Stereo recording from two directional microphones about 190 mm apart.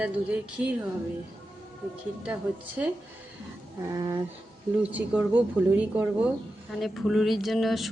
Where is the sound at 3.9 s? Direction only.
20° right (ahead or behind).